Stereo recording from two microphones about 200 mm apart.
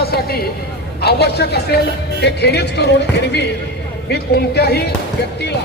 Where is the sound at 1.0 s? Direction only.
55° left (ahead or behind).